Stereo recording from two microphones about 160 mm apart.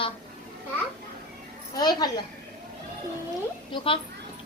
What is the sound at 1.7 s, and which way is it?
Speech, 25° left (ahead or behind).